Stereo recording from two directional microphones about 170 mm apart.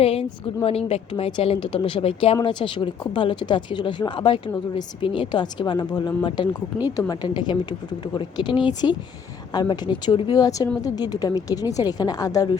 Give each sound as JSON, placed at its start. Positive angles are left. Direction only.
{"t": 0.0, "sound": "a woman's voice", "side_deg": 35}